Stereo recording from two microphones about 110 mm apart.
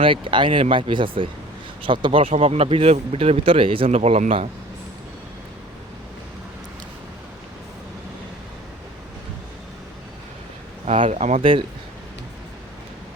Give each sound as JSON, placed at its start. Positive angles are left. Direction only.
{"t": 0.0, "sound": "speech", "side_deg": -50}
{"t": 2.3, "sound": "speech", "side_deg": -65}
{"t": 10.8, "sound": "speech", "side_deg": -55}
{"t": 11.1, "sound": "speech", "side_deg": -90}